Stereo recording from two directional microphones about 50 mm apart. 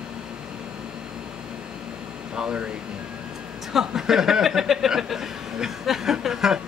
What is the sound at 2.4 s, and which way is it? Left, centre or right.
Speech, centre.